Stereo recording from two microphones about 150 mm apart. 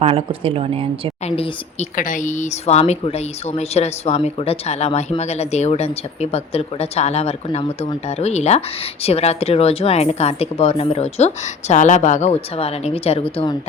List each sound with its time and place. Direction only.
0.0 s speech: 40° right (ahead or behind)
2.0 s speech: 60° left (ahead or behind); by 11.3 s 45° left (ahead or behind)
11.7 s speech: 55° left (ahead or behind); by 13.6 s 35° left (ahead or behind)